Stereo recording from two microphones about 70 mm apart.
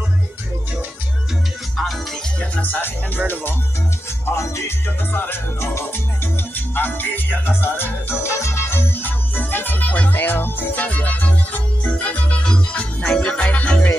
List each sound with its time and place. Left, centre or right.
2.5 s speech: left
4.3 s music: left; by 13.8 s centre